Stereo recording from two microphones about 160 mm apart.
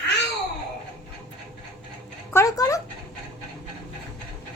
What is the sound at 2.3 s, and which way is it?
Speech, 20° left (ahead or behind).